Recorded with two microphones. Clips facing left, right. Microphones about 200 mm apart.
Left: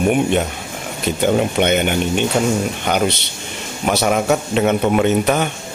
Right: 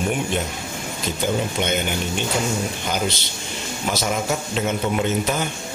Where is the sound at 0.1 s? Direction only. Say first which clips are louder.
Left 7 dB; 60° left (ahead or behind).